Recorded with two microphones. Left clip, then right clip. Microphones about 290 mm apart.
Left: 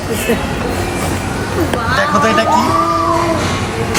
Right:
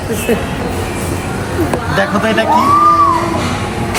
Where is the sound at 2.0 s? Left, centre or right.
Centre.